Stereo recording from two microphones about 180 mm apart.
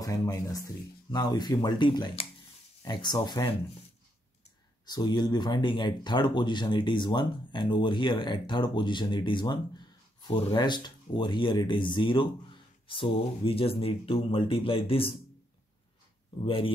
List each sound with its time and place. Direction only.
0.0 s speech: 20° left (ahead or behind)
4.8 s speech: 20° left (ahead or behind)
16.4 s speech: 30° left (ahead or behind)